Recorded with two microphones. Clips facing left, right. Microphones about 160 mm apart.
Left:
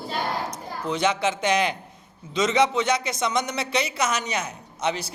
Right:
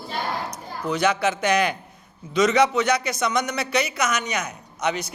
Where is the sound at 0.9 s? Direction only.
25° left (ahead or behind).